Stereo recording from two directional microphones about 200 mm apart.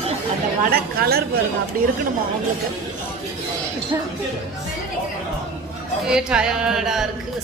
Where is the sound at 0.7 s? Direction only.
50° right (ahead or behind).